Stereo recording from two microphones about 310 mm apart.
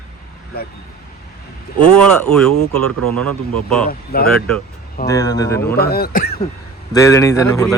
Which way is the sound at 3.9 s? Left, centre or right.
Left.